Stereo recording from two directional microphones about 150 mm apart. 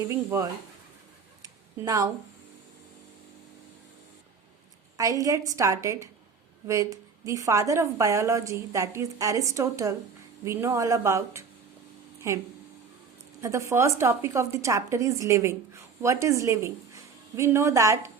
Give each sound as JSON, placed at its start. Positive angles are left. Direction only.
{"t": 0.1, "sound": "a woman's voice", "side_deg": -20}
{"t": 1.4, "sound": "a sound", "side_deg": -25}
{"t": 4.9, "sound": "a woman's voice", "side_deg": -20}
{"t": 13.4, "sound": "a woman's voice", "side_deg": -20}